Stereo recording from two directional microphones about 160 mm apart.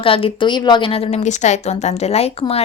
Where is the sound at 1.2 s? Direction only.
45° left (ahead or behind).